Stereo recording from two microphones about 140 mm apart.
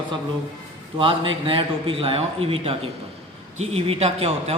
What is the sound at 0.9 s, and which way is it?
A man's voice, 40° right (ahead or behind).